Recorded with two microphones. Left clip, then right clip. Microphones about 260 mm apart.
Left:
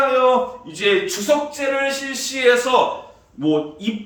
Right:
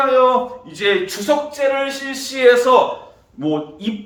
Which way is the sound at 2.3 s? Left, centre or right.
Centre.